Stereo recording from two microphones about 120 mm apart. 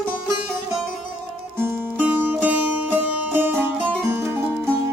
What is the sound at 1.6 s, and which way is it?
Music, 20° right (ahead or behind).